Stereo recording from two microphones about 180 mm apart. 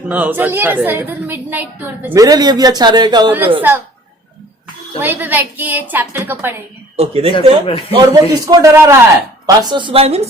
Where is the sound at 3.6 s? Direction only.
10° right (ahead or behind).